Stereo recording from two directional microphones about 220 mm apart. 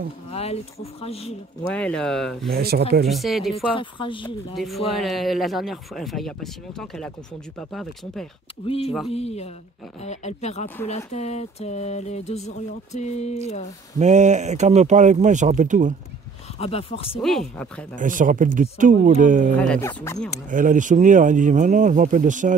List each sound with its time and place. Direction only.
0.3 s speech: 30° left (ahead or behind)
1.7 s speech: 5° left (ahead or behind)
2.5 s speech: 45° right (ahead or behind)
3.1 s speech: centre (ahead or behind)
3.5 s speech: 20° left (ahead or behind)
4.6 s speech: centre (ahead or behind)
9.1 s speech: 30° left (ahead or behind)
13.9 s speech: 30° right (ahead or behind)
16.5 s speech: 25° left (ahead or behind)
17.2 s speech: centre (ahead or behind)
17.9 s speech: 35° right (ahead or behind)
19.8 s speech: 15° left (ahead or behind)
20.4 s speech: 35° right (ahead or behind)